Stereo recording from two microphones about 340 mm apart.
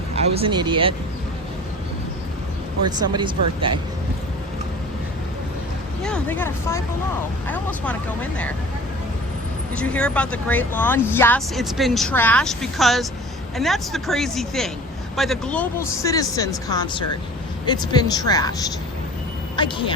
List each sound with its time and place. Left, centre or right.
0.3 s speech: centre
3.0 s speech: centre
6.0 s speech: centre
9.7 s speech: centre
19.5 s speech: centre